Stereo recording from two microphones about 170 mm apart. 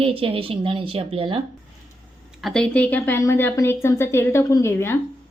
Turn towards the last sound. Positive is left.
turn(degrees=15)  # may be behind; listen again after turning